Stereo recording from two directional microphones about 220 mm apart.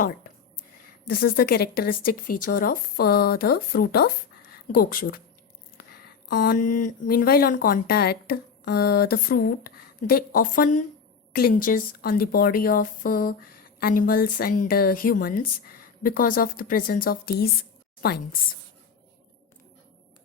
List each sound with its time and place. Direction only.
1.0 s a woman's voice: 40° left (ahead or behind)